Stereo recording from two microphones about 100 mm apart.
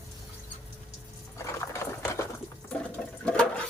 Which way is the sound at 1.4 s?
30° left (ahead or behind).